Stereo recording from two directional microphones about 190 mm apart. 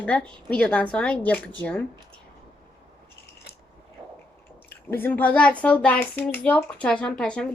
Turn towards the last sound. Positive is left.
turn(degrees=5)  # may be behind; listen again after turning